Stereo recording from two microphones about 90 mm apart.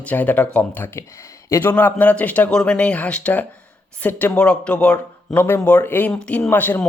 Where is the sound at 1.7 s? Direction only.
20° left (ahead or behind).